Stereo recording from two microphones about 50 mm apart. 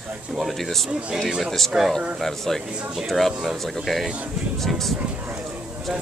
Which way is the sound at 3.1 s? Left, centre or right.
Centre.